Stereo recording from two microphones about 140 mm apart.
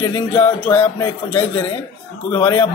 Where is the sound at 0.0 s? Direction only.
15° left (ahead or behind).